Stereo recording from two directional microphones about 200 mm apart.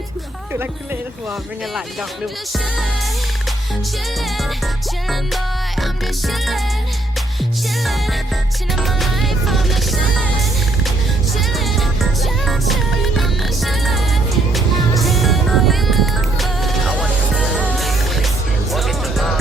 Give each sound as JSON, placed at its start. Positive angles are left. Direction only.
{"t": 4.4, "sound": "music", "side_deg": 0}
{"t": 8.7, "sound": "music", "side_deg": 0}
{"t": 11.3, "sound": "music", "side_deg": 0}